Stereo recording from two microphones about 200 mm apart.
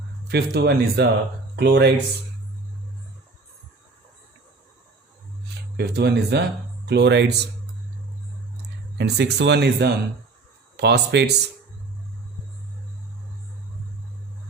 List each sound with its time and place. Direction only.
0.3 s speech: 55° right (ahead or behind)
5.7 s speech: 55° right (ahead or behind)
9.0 s speech: 55° right (ahead or behind)